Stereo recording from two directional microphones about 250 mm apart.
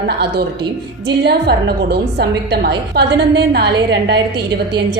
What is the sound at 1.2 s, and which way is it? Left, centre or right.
A woman's voice, right.